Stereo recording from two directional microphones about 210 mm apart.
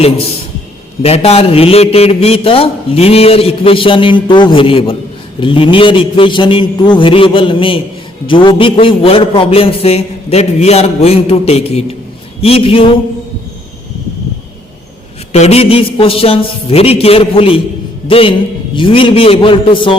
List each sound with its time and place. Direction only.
1.0 s a man's voice: 30° left (ahead or behind)
15.3 s a man's voice: 30° left (ahead or behind)